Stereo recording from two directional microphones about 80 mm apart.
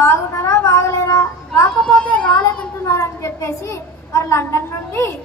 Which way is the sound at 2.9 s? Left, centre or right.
Left.